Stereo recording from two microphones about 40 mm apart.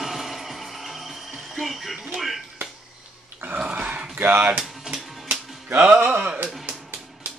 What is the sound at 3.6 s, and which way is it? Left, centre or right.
Dog, right.